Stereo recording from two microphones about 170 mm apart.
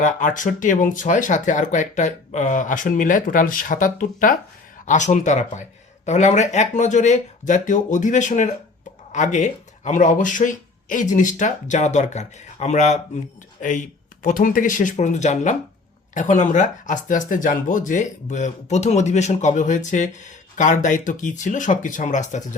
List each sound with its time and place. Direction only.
0.0 s speech: 50° left (ahead or behind)